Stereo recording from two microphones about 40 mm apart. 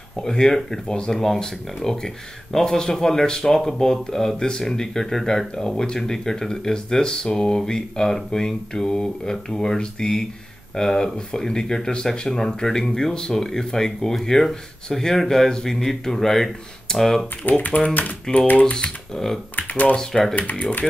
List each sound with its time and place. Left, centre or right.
0.2 s speech: centre
1.2 s speech: centre
17.5 s speech: left
18.6 s speech: left
19.1 s speech: centre
19.7 s speech: left
20.0 s speech: centre
20.3 s speech: left